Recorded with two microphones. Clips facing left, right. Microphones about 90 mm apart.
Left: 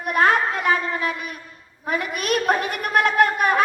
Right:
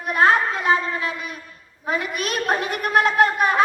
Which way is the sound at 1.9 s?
55° left (ahead or behind).